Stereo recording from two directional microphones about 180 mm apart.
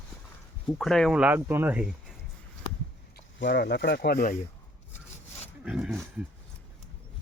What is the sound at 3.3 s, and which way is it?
Speech, 75° left (ahead or behind).